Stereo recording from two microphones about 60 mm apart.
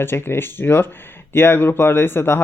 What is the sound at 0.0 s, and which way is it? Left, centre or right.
Speech, left.